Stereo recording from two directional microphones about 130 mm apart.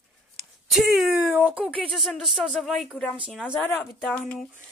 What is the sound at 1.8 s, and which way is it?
Speech, centre (ahead or behind).